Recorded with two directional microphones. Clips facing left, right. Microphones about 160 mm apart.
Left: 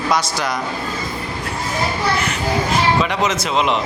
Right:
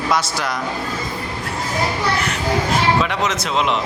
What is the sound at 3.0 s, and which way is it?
Speech, centre (ahead or behind).